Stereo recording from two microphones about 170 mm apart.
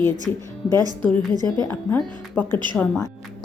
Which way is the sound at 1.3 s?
25° right (ahead or behind).